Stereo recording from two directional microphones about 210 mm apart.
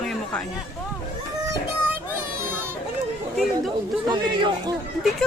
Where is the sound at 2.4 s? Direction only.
10° right (ahead or behind).